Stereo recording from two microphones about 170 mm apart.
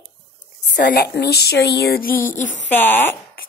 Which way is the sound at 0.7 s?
70° left (ahead or behind).